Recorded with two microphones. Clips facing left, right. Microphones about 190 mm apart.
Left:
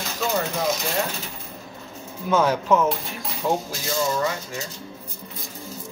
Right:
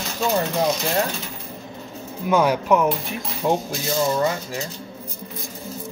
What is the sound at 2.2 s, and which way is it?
Speech, 10° right (ahead or behind).